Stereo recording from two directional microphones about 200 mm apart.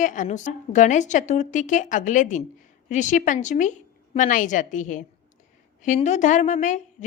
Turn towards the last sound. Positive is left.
turn(degrees=40)  # may be behind; listen again after turning